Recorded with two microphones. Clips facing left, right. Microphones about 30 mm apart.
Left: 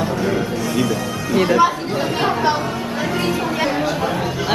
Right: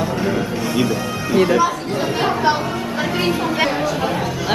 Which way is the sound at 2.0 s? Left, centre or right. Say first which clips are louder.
Even; centre.